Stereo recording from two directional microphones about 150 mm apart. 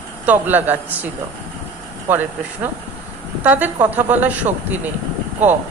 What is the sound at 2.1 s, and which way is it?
A man's voice, 15° right (ahead or behind).